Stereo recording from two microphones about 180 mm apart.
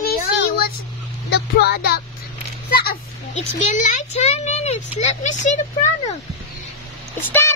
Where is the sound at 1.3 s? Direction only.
65° left (ahead or behind).